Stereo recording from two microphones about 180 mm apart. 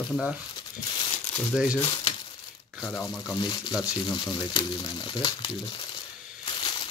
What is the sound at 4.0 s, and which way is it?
Speech, 25° left (ahead or behind).